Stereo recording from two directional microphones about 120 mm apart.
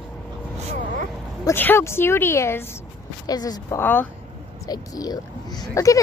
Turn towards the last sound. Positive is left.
turn(degrees=30)  # may be behind; listen again after turning